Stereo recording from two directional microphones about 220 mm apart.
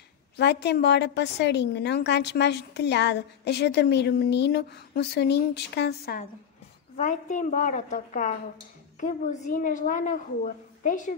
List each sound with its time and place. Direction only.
0.4 s a woman's voice: 50° left (ahead or behind)
7.0 s a woman's voice: 35° left (ahead or behind)